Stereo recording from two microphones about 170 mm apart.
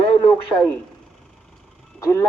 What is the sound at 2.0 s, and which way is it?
Speech, 15° left (ahead or behind).